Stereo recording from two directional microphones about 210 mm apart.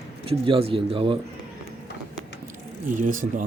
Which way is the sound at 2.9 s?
40° right (ahead or behind).